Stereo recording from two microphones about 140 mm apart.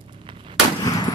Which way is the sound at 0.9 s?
25° left (ahead or behind).